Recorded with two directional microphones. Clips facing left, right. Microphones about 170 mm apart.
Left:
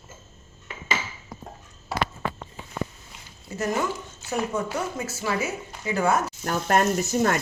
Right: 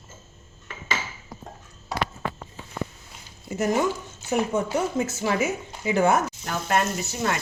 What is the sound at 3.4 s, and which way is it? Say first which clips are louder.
A woman's voice: right 3 dB; 15° right (ahead or behind).